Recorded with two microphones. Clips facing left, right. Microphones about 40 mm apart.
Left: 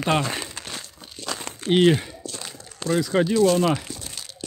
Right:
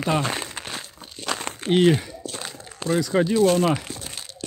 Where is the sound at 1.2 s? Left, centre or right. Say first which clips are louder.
Right 3 dB; right.